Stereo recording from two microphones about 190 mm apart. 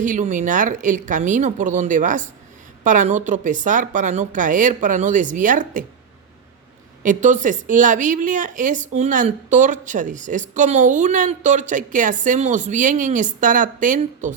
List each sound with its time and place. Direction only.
0.0 s a woman's voice: 40° right (ahead or behind)
7.0 s a woman's voice: 40° right (ahead or behind)